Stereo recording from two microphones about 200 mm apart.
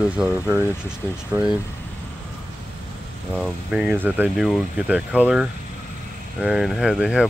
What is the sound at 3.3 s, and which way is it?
Speech, 5° right (ahead or behind).